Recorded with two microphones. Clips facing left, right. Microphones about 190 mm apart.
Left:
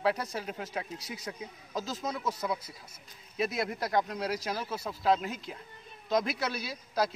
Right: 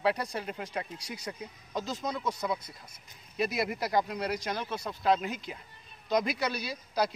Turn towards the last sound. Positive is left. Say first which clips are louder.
# even
turn(degrees=0)  # may be behind; listen again after turning